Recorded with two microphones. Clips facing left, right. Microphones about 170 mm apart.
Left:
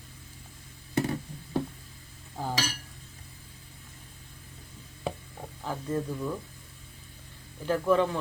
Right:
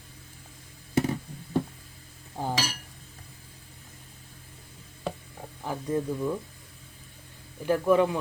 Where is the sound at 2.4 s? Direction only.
20° right (ahead or behind).